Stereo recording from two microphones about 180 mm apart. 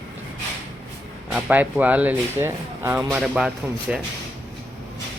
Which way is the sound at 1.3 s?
5° right (ahead or behind).